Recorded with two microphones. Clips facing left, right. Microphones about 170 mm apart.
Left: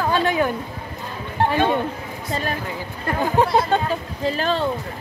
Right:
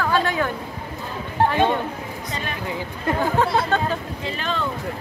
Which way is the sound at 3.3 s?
20° left (ahead or behind).